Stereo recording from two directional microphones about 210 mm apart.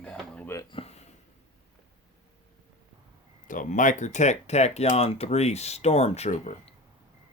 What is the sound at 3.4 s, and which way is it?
Speech, 40° left (ahead or behind).